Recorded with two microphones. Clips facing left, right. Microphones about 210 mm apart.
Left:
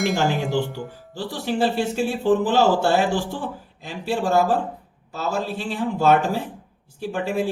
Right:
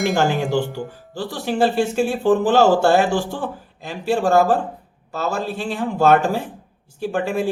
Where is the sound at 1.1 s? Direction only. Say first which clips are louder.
Right 1 dB; 45° right (ahead or behind).